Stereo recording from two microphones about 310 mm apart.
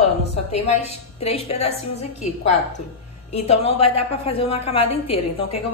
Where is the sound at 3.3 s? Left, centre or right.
Centre.